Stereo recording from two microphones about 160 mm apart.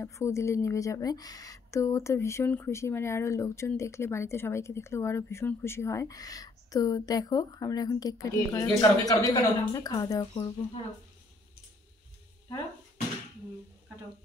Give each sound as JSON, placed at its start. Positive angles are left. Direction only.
{"t": 0.0, "sound": "a woman's voice", "side_deg": 20}